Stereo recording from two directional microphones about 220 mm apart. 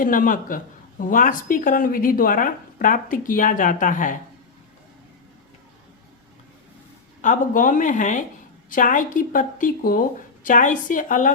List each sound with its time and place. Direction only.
0.0 s speech: 40° left (ahead or behind)
7.2 s speech: 35° left (ahead or behind)